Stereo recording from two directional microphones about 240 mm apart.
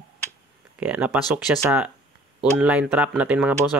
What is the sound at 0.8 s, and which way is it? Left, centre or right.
Speech, centre.